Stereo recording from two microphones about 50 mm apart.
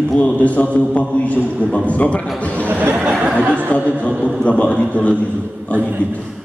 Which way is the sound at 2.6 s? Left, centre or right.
Right.